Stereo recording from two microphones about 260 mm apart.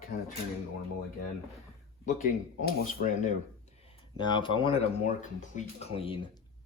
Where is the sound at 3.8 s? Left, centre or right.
Centre.